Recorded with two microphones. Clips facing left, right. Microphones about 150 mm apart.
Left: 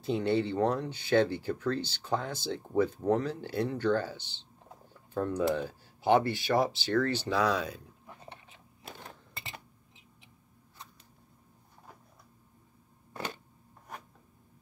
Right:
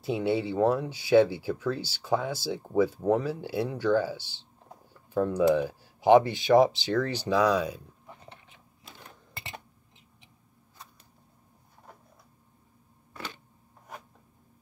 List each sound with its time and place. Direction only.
0.0 s speech: 5° right (ahead or behind)